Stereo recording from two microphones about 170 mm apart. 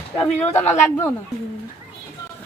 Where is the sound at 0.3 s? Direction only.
40° left (ahead or behind).